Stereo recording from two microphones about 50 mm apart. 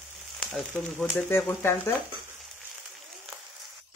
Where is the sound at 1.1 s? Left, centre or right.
Left.